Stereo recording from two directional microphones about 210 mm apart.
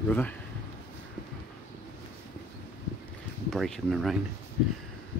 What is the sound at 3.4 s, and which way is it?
Speech, centre (ahead or behind).